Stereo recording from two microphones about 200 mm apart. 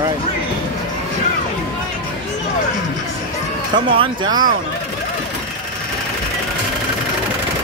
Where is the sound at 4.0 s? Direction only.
20° right (ahead or behind).